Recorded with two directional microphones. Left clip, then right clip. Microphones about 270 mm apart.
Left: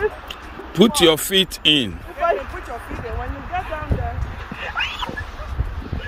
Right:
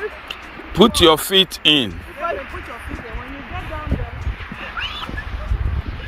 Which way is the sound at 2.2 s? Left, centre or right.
Left.